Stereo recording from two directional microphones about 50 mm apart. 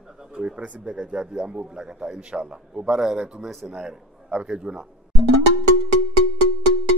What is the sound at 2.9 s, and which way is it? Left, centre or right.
Speech, centre.